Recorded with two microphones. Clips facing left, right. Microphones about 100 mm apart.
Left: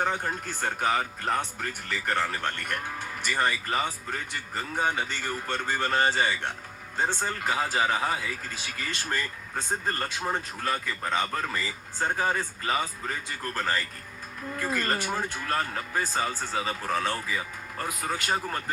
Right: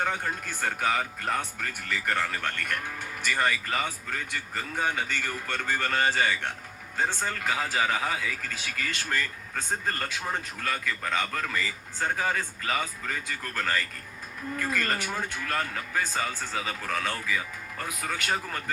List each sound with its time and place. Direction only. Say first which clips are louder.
0.0 s speech: left 1 dB; 25° left (ahead or behind)